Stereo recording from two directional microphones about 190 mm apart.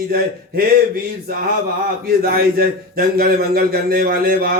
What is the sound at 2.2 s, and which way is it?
Speech, 50° right (ahead or behind).